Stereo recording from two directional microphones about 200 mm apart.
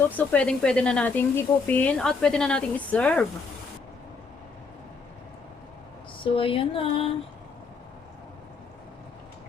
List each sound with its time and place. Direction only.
0.1 s speech: 5° left (ahead or behind)
6.2 s music: 25° left (ahead or behind)